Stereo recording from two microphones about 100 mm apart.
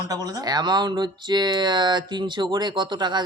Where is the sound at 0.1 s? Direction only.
40° right (ahead or behind).